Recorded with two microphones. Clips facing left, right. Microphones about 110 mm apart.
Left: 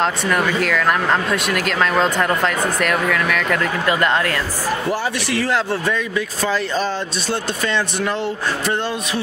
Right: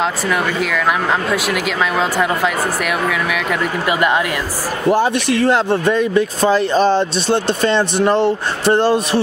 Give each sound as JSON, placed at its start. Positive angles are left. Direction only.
{"t": 0.0, "sound": "speech", "side_deg": -5}